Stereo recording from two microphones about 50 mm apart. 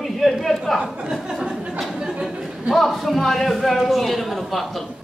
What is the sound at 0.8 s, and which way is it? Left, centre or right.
Speech, centre.